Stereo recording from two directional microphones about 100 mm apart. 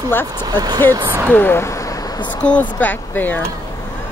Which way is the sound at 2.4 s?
15° left (ahead or behind).